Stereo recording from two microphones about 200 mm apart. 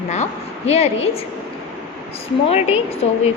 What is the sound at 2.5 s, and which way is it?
Speech, 30° left (ahead or behind).